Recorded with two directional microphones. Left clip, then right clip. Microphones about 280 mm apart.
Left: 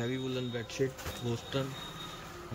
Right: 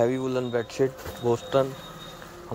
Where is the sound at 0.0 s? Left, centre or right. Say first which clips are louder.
Right 11 dB; centre.